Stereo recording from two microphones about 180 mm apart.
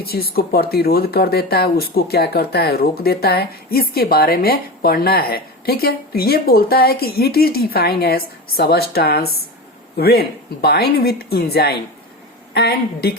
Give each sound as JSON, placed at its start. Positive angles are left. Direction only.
{"t": 0.0, "sound": "speech", "side_deg": 60}